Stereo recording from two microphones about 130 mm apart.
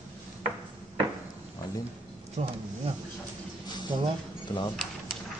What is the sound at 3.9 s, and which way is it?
Speech, 35° right (ahead or behind).